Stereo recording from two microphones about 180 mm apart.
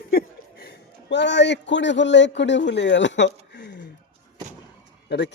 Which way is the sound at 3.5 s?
75° left (ahead or behind).